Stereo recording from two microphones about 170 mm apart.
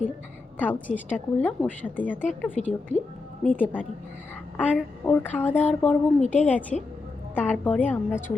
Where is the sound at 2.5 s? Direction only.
45° left (ahead or behind).